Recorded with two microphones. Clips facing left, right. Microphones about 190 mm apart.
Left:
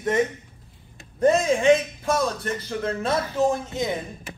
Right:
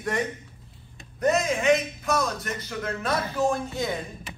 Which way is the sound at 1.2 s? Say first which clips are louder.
Left 4 dB; 30° left (ahead or behind).